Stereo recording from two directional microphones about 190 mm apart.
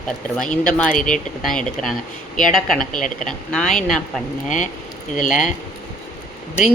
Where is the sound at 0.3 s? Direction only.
5° left (ahead or behind).